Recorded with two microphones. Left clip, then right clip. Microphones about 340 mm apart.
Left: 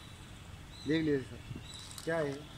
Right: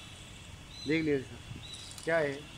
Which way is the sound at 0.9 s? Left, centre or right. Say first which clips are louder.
Right 2 dB; centre.